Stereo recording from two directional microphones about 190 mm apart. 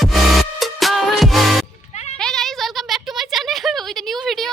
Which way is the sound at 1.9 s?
35° left (ahead or behind).